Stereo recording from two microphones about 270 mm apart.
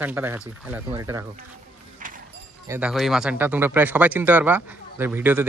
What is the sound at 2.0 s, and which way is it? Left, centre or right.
Clip-clop, right.